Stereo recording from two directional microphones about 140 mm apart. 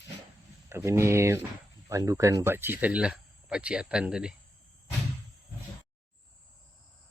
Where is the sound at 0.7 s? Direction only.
20° right (ahead or behind).